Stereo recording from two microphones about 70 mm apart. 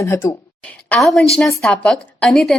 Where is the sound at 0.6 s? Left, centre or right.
Left.